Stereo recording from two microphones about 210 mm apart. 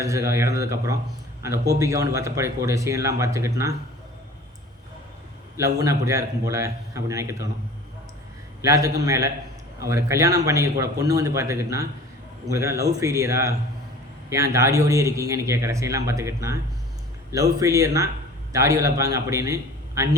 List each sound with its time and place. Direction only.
0.0 s a man's voice: 15° right (ahead or behind)
5.5 s a man's voice: 15° right (ahead or behind)
8.6 s a man's voice: 15° right (ahead or behind)